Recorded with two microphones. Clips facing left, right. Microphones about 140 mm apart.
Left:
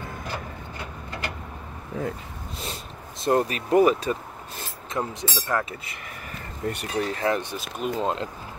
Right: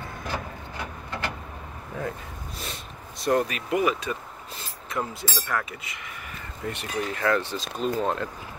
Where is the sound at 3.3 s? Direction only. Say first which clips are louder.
Left 2 dB; 30° left (ahead or behind).